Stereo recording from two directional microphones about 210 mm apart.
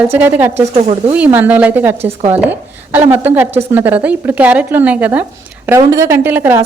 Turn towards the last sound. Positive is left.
turn(degrees=-10)  # may be behind; listen again after turning